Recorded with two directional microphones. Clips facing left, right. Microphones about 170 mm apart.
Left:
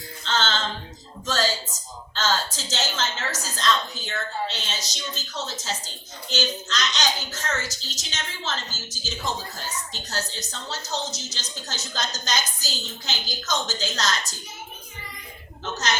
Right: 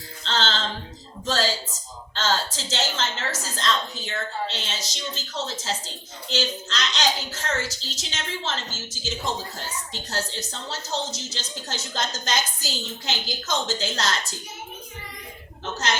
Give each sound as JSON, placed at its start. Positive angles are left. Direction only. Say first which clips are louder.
{"t": 0.3, "sound": "music", "louder": "even", "side_deg": -35}
{"t": 1.2, "sound": "a woman's voice", "louder": "right 1 dB", "side_deg": -30}
{"t": 15.6, "sound": "a woman's voice", "louder": "even", "side_deg": -30}